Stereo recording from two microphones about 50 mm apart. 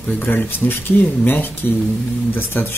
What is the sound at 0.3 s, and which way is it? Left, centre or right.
Speech, left.